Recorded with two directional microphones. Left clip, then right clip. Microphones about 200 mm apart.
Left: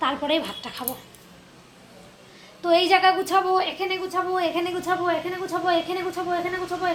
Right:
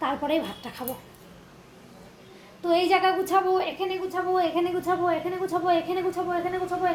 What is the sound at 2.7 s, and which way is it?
A woman's voice, 15° left (ahead or behind).